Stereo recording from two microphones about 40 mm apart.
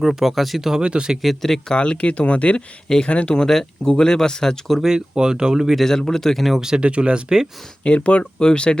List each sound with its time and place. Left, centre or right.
0.0 s speech: centre
0.8 s speech: right
1.2 s speech: centre
1.7 s speech: left
3.3 s speech: centre
4.8 s speech: centre
5.7 s speech: centre
6.6 s speech: centre
6.8 s speech: right
7.9 s speech: left